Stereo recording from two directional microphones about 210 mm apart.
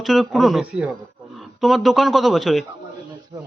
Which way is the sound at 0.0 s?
Centre (ahead or behind).